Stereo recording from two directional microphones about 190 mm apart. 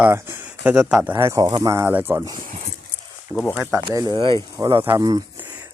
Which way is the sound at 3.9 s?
20° right (ahead or behind).